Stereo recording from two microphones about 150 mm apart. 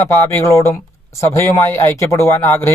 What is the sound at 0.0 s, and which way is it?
A man's voice, 15° left (ahead or behind).